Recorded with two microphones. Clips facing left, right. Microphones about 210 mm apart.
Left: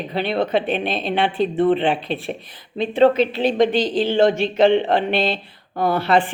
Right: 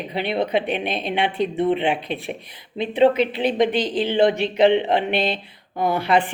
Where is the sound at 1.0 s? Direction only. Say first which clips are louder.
Left 2 dB; 30° left (ahead or behind).